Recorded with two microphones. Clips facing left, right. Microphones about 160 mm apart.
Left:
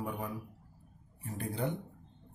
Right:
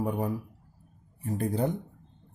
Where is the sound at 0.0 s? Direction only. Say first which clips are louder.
Right 8 dB; 40° right (ahead or behind).